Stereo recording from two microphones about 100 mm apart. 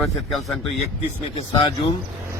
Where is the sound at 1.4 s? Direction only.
80° left.